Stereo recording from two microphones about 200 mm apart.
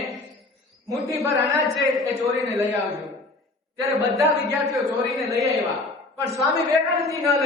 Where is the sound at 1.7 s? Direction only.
Centre (ahead or behind).